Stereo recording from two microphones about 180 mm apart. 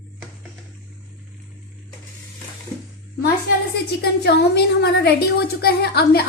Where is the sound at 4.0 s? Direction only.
65° left (ahead or behind).